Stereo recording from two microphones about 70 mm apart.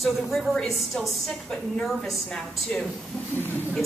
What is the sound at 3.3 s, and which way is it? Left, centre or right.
Speech, left.